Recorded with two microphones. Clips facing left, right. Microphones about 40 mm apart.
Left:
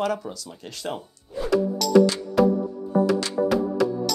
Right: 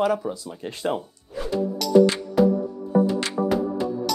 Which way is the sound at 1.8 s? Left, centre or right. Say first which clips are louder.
Left 1 dB; centre.